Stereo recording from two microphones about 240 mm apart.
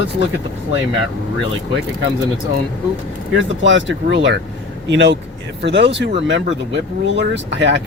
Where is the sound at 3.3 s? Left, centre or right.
Right.